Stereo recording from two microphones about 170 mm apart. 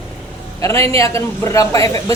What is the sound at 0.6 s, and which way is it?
A man's voice, 15° left (ahead or behind).